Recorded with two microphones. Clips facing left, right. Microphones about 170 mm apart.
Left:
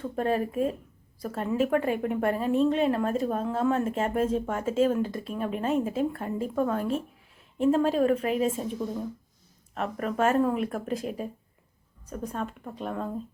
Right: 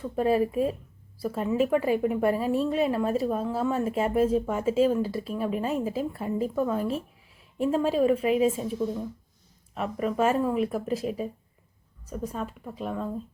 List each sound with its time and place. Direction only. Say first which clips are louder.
0.2 s a woman's voice: right 3 dB; 5° right (ahead or behind)
9.7 s a woman's voice: right 2 dB; 5° right (ahead or behind)